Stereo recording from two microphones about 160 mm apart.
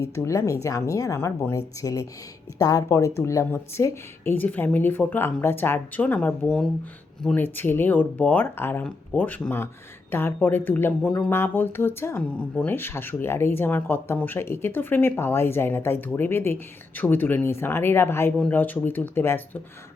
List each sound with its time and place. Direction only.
0.0 s a woman's voice: 20° left (ahead or behind)